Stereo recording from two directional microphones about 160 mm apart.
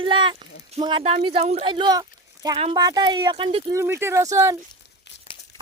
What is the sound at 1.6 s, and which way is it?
Speech, 30° right (ahead or behind).